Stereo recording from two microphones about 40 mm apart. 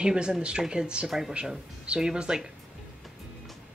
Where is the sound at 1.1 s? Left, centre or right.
Centre.